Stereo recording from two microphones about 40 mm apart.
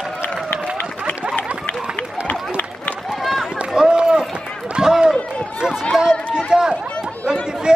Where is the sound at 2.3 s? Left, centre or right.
Left.